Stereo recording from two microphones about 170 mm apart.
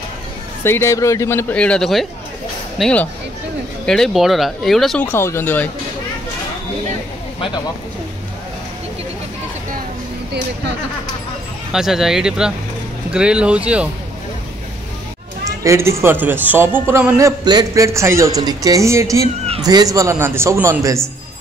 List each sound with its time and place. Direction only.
0.7 s speech: 15° left (ahead or behind)
5.0 s speech: 15° left (ahead or behind)
7.3 s speech: 30° left (ahead or behind)
10.3 s speech: 80° right
11.7 s speech: centre (ahead or behind)
15.4 s speech: 15° right (ahead or behind)
17.2 s a man's voice: 20° right (ahead or behind)